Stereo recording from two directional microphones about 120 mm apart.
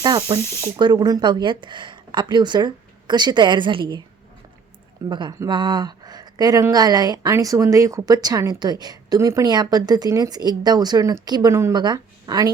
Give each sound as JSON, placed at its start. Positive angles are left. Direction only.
{"t": 0.0, "sound": "speech", "side_deg": -40}
{"t": 5.0, "sound": "speech", "side_deg": -35}